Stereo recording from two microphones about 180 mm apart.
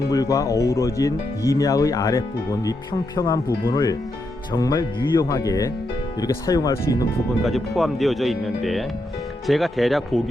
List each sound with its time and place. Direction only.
0.1 s speech: 20° left (ahead or behind)
7.4 s speech: centre (ahead or behind)